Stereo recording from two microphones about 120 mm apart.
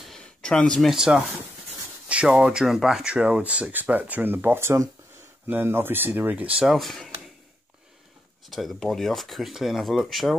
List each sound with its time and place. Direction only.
0.0 s a sound: 5° left (ahead or behind)
2.0 s speech: 10° right (ahead or behind)
6.7 s speech: centre (ahead or behind)
8.5 s speech: centre (ahead or behind)